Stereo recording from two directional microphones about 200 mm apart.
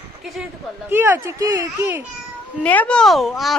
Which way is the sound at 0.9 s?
10° right (ahead or behind).